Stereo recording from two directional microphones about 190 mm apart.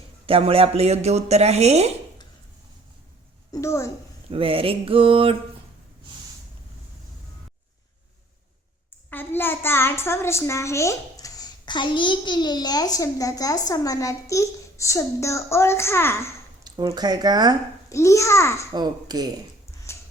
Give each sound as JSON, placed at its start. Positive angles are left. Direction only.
{"t": 0.3, "sound": "a woman's voice", "side_deg": -30}
{"t": 3.5, "sound": "a child's voice", "side_deg": 15}
{"t": 4.3, "sound": "speech", "side_deg": -30}
{"t": 9.0, "sound": "a child's voice", "side_deg": 10}
{"t": 16.6, "sound": "speech", "side_deg": -20}
{"t": 17.8, "sound": "a child's voice", "side_deg": 15}
{"t": 18.7, "sound": "speech", "side_deg": -20}
{"t": 19.9, "sound": "a sound", "side_deg": 15}